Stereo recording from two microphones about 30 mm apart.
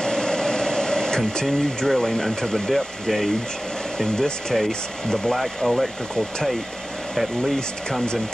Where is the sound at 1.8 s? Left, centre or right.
Centre.